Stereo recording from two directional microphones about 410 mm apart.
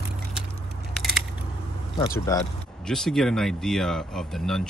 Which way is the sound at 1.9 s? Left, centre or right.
Centre.